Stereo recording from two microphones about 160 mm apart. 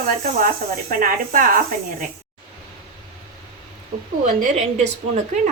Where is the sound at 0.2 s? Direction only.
60° right (ahead or behind).